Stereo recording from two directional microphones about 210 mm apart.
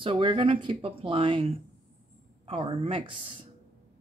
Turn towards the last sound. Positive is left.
turn(degrees=-25)  # may be behind; listen again after turning